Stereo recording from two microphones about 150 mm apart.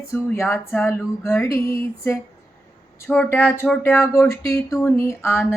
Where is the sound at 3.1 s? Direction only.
10° left (ahead or behind).